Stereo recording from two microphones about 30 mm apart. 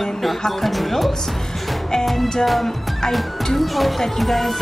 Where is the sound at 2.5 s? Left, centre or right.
Centre.